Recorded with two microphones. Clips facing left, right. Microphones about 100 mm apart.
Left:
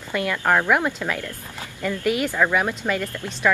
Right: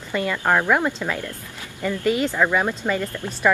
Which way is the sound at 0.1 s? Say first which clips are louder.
Even; 10° right (ahead or behind).